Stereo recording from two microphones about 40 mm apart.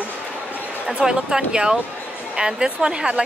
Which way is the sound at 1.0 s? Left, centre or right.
Centre.